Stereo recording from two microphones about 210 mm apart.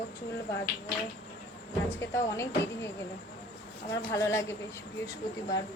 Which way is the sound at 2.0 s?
15° left (ahead or behind).